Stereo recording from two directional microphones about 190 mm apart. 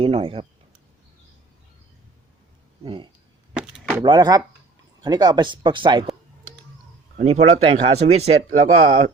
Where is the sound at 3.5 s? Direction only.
5° right (ahead or behind).